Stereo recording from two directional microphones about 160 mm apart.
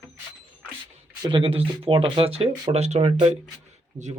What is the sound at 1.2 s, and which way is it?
Speech, 30° right (ahead or behind).